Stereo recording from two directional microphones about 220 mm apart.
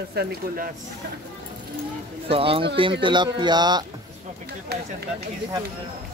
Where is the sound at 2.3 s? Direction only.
25° right (ahead or behind).